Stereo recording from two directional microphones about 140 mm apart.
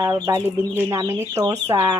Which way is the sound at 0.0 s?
30° right (ahead or behind).